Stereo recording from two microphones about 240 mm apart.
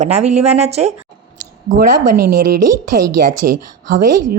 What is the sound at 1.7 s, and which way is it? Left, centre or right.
Speech, right.